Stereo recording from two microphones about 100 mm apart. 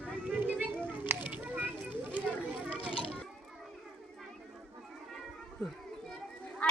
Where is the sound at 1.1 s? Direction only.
20° right (ahead or behind).